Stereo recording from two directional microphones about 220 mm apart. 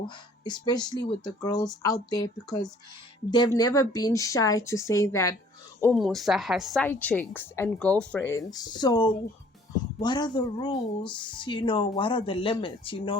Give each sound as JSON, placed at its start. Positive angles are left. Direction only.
{"t": 0.4, "sound": "a woman's voice", "side_deg": 20}
{"t": 5.8, "sound": "a woman's voice", "side_deg": 0}